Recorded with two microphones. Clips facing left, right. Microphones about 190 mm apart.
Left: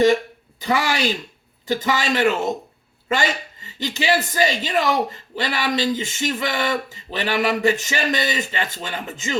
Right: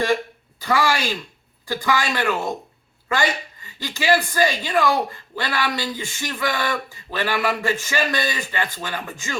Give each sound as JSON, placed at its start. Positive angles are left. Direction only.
{"t": 0.6, "sound": "speech", "side_deg": 20}